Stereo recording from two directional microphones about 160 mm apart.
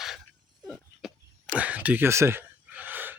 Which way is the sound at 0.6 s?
5° right (ahead or behind).